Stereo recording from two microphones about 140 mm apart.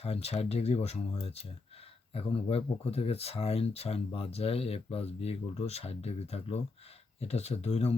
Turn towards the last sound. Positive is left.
turn(degrees=50)  # may be behind; listen again after turning